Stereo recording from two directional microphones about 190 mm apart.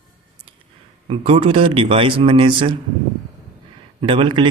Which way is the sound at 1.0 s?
30° right (ahead or behind).